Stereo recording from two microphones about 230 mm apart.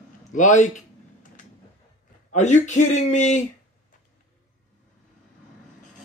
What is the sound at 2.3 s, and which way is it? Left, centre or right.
Speech, left.